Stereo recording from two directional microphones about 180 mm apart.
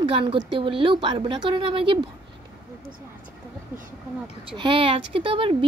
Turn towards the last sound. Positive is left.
turn(degrees=-30)  # may be behind; listen again after turning